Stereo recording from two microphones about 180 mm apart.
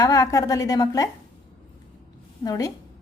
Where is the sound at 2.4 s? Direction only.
20° left (ahead or behind).